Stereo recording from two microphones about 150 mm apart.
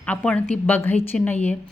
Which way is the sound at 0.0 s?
10° left (ahead or behind).